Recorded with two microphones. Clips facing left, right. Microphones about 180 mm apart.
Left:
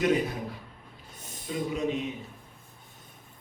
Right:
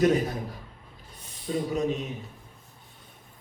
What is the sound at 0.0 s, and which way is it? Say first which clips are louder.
Speech: right 3 dB; 40° right (ahead or behind).